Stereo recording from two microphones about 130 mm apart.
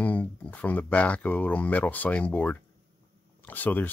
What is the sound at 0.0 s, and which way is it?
Speech, 10° left (ahead or behind).